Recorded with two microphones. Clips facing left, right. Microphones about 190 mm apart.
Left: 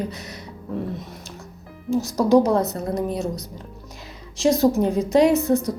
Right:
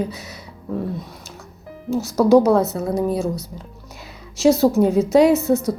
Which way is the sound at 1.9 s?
15° left (ahead or behind).